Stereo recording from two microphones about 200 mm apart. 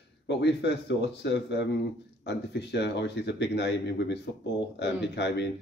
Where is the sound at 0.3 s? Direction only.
60° left (ahead or behind).